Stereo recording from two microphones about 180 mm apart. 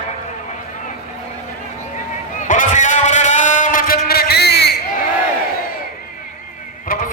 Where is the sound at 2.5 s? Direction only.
45° left (ahead or behind); by 4.8 s 65° left (ahead or behind).